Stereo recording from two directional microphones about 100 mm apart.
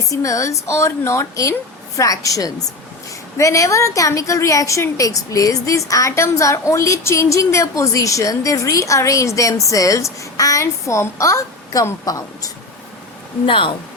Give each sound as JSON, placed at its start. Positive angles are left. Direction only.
{"t": 0.1, "sound": "a woman's voice", "side_deg": 35}
{"t": 13.4, "sound": "speech", "side_deg": 60}